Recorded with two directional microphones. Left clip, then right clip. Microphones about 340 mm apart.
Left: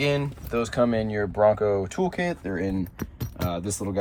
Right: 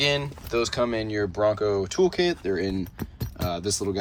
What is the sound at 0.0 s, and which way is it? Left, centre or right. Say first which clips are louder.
Speech: right 1 dB; centre.